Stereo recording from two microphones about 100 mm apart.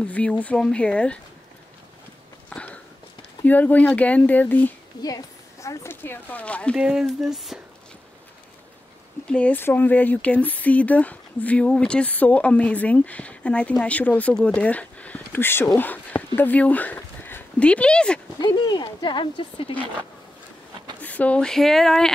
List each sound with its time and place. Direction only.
0.0 s speech: 10° left (ahead or behind)
2.5 s a sound: 10° left (ahead or behind)
3.4 s speech: 15° left (ahead or behind)
5.0 s a sound: 35° left (ahead or behind)
5.9 s speech: 20° left (ahead or behind)
6.8 s speech: 10° right (ahead or behind)
9.3 s speech: 15° left (ahead or behind)
18.4 s speech: 45° left (ahead or behind)
21.0 s speech: 15° left (ahead or behind)